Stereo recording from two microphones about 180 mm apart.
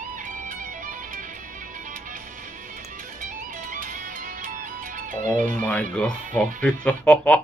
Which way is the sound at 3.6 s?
45° right (ahead or behind).